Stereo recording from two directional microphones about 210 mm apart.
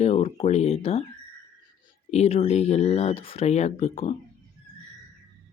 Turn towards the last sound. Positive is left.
turn(degrees=30)  # may be behind; listen again after turning